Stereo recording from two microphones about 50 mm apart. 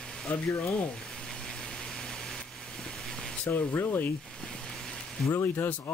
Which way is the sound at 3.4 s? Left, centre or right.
Left.